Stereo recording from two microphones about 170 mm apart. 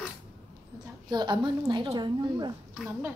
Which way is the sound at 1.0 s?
25° right (ahead or behind).